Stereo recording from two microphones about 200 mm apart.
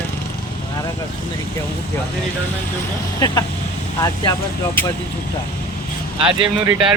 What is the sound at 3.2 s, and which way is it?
Speech, 20° left (ahead or behind).